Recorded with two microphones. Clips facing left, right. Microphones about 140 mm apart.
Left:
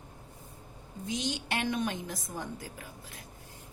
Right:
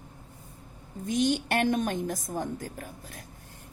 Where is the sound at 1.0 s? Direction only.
50° right (ahead or behind).